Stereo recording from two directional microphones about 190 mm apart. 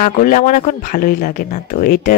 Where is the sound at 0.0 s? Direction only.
45° left (ahead or behind).